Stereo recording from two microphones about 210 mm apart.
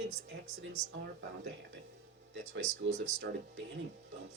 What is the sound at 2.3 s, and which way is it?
Speech, 60° right (ahead or behind).